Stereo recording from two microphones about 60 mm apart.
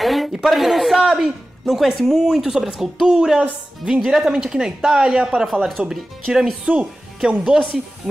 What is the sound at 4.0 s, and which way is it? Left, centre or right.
Speech, centre.